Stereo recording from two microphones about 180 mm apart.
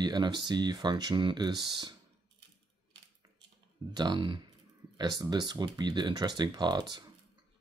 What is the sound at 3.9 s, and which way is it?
Speech, 25° right (ahead or behind).